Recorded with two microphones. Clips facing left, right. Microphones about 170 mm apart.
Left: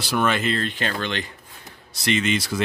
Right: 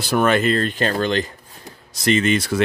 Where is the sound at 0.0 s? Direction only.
50° right (ahead or behind).